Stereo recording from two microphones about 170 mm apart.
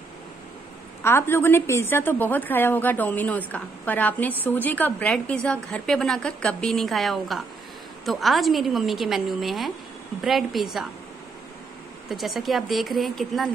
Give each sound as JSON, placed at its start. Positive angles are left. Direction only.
{"t": 1.0, "sound": "a woman's voice", "side_deg": 15}
{"t": 12.1, "sound": "a woman's voice", "side_deg": 0}